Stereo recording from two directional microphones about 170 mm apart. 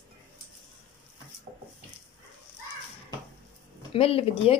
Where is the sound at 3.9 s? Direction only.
35° left (ahead or behind).